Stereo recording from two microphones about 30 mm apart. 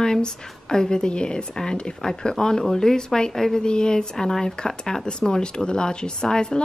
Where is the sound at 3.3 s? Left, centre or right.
Centre.